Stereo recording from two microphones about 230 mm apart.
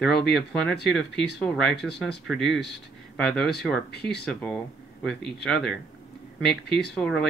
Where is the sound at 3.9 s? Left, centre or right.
Left.